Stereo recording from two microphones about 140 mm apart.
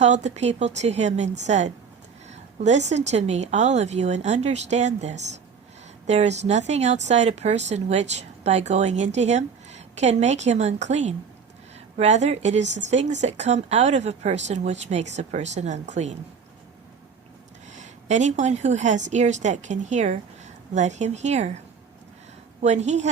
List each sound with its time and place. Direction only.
0.0 s speech: 55° right (ahead or behind)
17.7 s a woman's voice: 60° right (ahead or behind)
22.6 s speech: 55° right (ahead or behind)